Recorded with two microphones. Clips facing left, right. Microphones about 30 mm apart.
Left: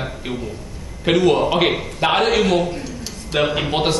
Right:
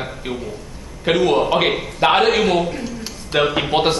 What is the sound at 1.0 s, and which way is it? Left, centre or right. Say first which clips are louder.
A man's voice: even; centre.